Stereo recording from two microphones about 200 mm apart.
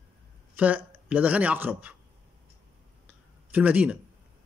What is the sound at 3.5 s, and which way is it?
Speech, 10° right (ahead or behind).